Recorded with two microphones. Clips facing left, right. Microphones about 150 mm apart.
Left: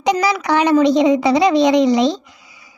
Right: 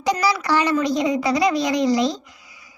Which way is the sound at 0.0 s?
20° left (ahead or behind).